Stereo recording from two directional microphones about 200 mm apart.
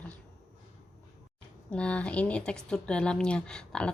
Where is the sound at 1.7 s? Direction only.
5° left (ahead or behind).